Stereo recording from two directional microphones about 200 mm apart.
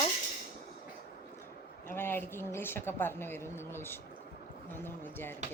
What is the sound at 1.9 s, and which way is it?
A woman's voice, 10° left (ahead or behind).